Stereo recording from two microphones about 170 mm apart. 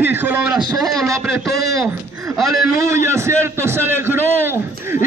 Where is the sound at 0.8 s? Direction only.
Centre (ahead or behind).